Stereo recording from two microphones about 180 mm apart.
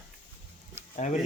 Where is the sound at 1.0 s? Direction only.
40° left (ahead or behind).